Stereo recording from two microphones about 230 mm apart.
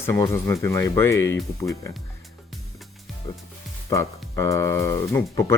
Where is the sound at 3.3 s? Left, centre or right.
Centre.